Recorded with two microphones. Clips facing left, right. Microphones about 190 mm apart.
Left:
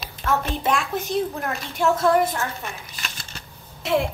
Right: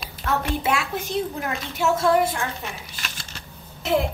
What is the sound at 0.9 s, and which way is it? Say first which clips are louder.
Speech: left 2 dB; 50° left (ahead or behind).